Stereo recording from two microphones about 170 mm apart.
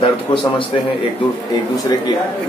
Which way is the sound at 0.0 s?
30° left (ahead or behind).